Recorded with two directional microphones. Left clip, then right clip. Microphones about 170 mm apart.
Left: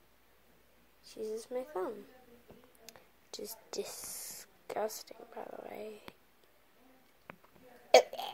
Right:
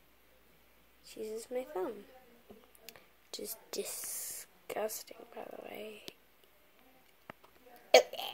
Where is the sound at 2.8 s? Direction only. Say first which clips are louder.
Right 2 dB; 10° right (ahead or behind).